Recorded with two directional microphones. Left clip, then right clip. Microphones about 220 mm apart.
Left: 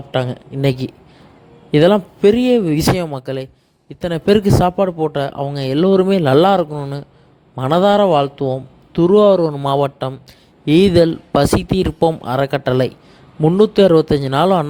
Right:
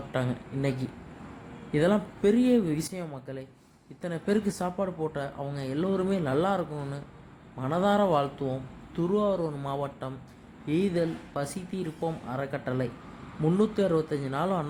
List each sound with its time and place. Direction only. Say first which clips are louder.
0.1 s speech: left 12 dB; 35° left (ahead or behind)